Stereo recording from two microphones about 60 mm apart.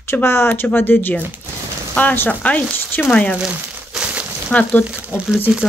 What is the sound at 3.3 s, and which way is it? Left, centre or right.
Crumpling, centre.